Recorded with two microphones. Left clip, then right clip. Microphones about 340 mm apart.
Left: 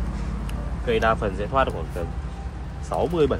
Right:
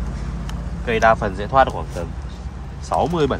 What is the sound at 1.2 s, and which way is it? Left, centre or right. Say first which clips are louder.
Speech: right 6 dB; right.